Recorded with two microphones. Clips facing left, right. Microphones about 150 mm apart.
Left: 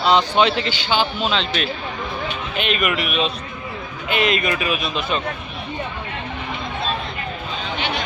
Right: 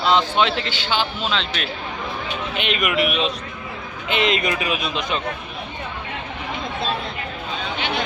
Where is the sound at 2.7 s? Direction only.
15° right (ahead or behind).